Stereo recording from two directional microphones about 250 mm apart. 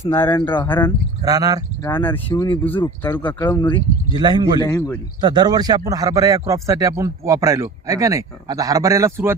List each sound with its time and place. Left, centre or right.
0.0 s speech: centre
1.2 s a man's voice: centre
1.8 s speech: centre
4.1 s a man's voice: centre
4.6 s speech: centre
5.2 s a man's voice: centre